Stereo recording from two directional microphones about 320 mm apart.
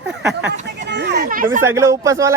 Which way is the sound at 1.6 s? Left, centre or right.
Centre.